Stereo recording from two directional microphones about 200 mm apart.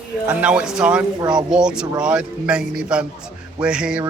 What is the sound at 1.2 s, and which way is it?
Speech, 20° right (ahead or behind).